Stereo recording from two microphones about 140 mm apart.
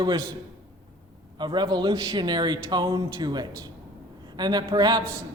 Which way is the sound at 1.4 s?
30° right (ahead or behind).